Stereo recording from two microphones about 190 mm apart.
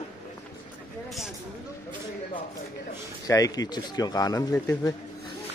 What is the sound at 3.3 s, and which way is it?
Speech, 20° left (ahead or behind).